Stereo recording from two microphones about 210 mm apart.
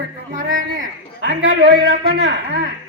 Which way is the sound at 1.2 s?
55° right (ahead or behind).